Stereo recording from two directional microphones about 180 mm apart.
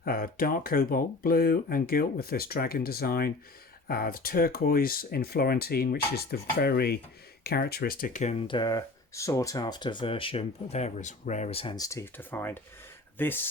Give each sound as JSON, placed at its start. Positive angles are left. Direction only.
{"t": 0.0, "sound": "speech", "side_deg": 55}